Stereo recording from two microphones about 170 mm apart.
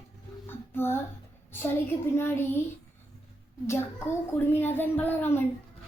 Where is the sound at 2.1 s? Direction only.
15° left (ahead or behind).